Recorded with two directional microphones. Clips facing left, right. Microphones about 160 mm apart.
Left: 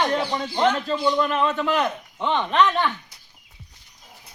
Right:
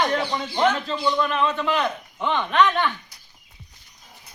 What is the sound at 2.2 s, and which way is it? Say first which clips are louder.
Speech: left 1 dB; 30° left (ahead or behind).